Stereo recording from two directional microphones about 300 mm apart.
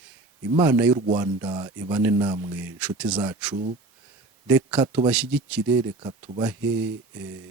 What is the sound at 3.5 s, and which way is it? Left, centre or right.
Speech, right.